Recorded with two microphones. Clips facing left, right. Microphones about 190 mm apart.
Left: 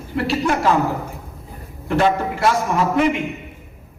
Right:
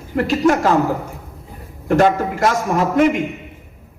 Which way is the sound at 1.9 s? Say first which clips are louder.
Right 3 dB; 45° right (ahead or behind).